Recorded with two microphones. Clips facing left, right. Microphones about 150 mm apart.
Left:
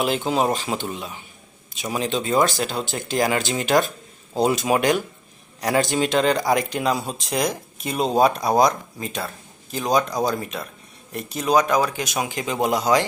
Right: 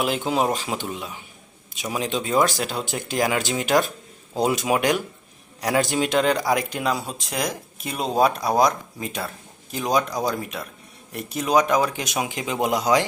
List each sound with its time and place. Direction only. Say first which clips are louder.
0.0 s speech: left 1 dB; 5° right (ahead or behind)
9.0 s speech: left 1 dB; 15° right (ahead or behind)